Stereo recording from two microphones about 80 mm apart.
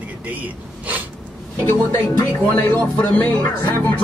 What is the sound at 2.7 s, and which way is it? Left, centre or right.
Speech, centre.